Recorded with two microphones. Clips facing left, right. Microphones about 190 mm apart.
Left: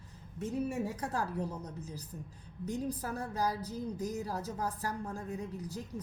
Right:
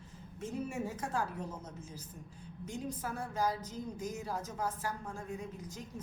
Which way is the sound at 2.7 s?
40° left (ahead or behind).